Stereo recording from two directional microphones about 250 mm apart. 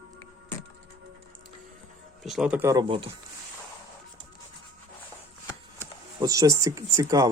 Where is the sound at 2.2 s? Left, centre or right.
Centre; by 3.1 s right.